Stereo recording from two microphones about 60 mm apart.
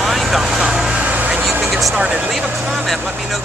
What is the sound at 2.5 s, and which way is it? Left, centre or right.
Speech, centre.